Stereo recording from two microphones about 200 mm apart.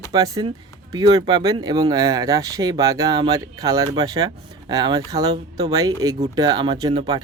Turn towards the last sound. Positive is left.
turn(degrees=-25)  # may be behind; listen again after turning